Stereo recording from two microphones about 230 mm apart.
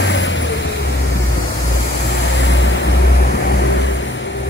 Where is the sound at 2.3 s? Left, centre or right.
Left.